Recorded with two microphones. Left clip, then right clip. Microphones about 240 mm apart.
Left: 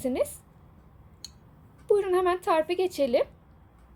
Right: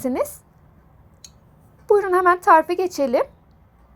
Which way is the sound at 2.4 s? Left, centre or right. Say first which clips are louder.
Right 10 dB; right.